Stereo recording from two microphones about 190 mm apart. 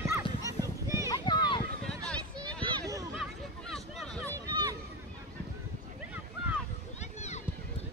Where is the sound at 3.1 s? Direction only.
Centre (ahead or behind).